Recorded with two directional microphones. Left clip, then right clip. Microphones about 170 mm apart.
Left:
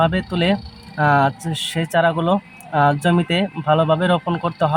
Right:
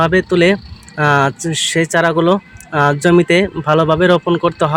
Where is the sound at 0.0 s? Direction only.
20° right (ahead or behind).